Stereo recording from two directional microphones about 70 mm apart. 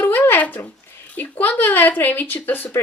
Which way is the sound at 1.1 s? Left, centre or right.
Left.